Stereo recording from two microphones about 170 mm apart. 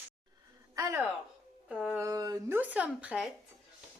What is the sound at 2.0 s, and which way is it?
A woman's voice, 20° right (ahead or behind).